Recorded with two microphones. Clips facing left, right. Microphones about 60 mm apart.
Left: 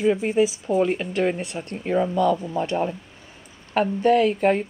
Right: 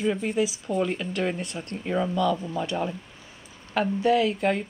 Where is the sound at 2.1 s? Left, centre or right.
Left.